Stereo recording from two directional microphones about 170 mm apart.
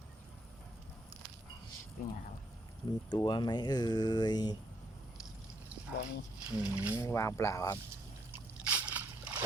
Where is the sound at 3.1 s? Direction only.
25° left (ahead or behind).